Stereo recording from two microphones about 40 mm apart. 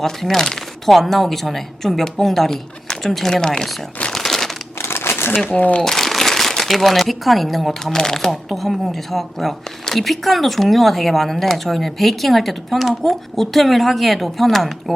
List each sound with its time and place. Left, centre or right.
0.0 s a woman's voice: centre
3.4 s speech: centre
4.1 s crumpling: centre
4.8 s crumpling: left
5.8 s a sound: centre
6.6 s a woman's voice: centre
7.9 s a woman's voice: centre